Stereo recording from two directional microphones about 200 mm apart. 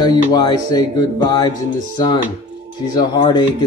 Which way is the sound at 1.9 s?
20° left (ahead or behind).